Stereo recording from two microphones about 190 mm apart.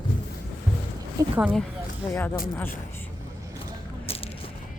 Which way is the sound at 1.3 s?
5° right (ahead or behind).